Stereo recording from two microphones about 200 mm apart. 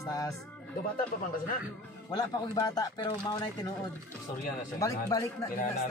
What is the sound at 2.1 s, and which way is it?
Speech, 20° left (ahead or behind).